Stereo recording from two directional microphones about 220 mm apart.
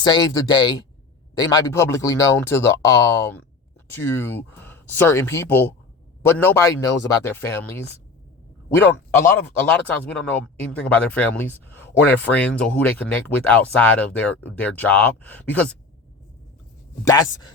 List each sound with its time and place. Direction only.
0.0 s speech: 20° left (ahead or behind)